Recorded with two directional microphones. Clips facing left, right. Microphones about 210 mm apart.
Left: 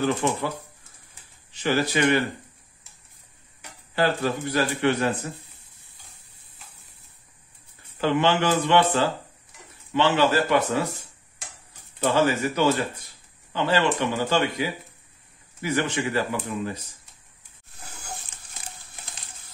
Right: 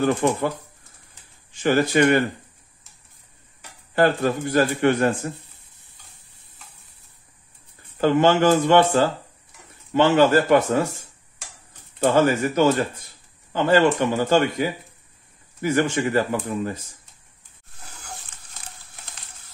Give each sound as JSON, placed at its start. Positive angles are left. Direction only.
{"t": 0.0, "sound": "a man's voice", "side_deg": -50}
{"t": 1.5, "sound": "a man's voice", "side_deg": -50}
{"t": 3.9, "sound": "a man's voice", "side_deg": -50}
{"t": 8.0, "sound": "a man's voice", "side_deg": -45}
{"t": 12.0, "sound": "a man's voice", "side_deg": -50}